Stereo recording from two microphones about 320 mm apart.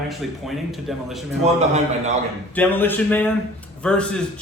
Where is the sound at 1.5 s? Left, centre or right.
Right.